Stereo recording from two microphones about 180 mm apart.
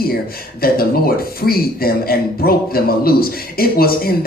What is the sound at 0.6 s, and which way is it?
Speech, 55° left (ahead or behind).